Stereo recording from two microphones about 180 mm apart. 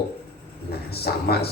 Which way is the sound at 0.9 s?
60° left (ahead or behind).